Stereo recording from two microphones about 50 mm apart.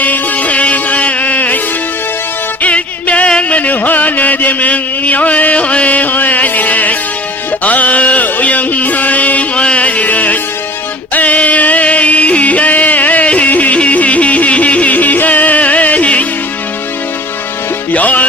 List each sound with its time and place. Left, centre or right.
0.0 s music: left
3.6 s music: left
7.6 s a sound: left
17.9 s music: left